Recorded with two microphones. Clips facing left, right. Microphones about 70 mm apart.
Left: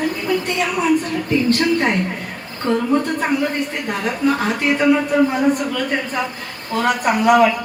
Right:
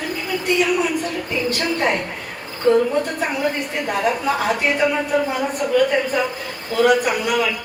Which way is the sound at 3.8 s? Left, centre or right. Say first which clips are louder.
Even; centre.